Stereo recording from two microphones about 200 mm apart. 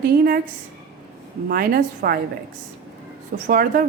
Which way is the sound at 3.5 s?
45° right (ahead or behind).